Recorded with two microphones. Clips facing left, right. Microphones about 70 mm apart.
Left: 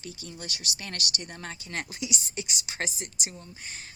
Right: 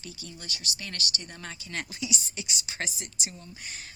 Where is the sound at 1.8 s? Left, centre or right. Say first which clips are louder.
Right 1 dB; left.